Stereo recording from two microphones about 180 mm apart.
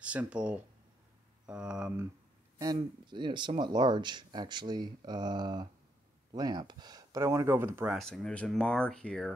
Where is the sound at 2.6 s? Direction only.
25° right (ahead or behind).